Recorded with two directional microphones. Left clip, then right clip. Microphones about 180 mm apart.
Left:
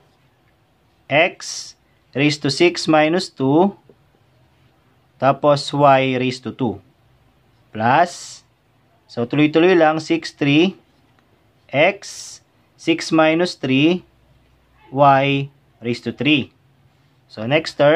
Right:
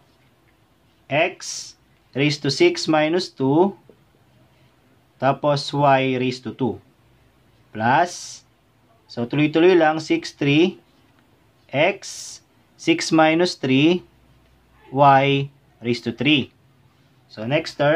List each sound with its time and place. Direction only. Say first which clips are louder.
1.0 s speech: left 4 dB; 30° left (ahead or behind)
5.2 s speech: left 4 dB; 25° left (ahead or behind)
7.7 s speech: left 3 dB; 25° left (ahead or behind)
17.3 s speech: left 4 dB; 30° left (ahead or behind)